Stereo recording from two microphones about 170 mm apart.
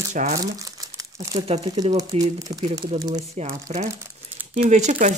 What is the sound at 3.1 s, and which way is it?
Speech, 40° right (ahead or behind).